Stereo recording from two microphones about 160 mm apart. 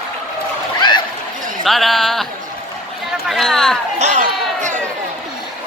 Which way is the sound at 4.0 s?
45° right (ahead or behind).